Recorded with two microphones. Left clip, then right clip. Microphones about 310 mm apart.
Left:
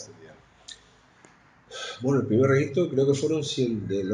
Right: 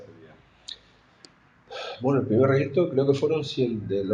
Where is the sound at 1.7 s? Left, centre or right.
Centre.